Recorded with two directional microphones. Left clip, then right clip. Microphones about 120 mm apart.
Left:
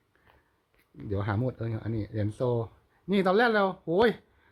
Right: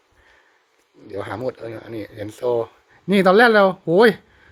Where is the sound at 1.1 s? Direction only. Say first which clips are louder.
Right 6 dB; 35° right (ahead or behind).